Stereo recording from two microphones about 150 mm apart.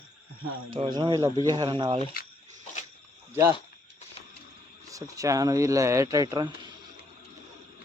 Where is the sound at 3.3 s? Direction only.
15° right (ahead or behind).